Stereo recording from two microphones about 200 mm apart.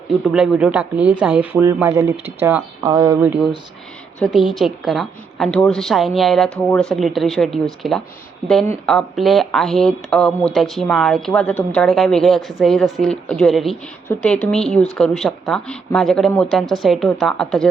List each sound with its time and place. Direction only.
0.3 s speech: 5° right (ahead or behind)
4.2 s speech: centre (ahead or behind)